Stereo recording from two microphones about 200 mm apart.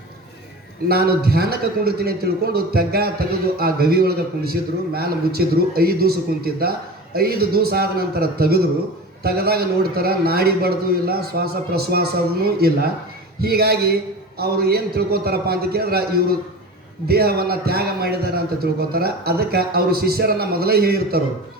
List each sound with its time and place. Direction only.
0.9 s a man's voice: 50° right (ahead or behind)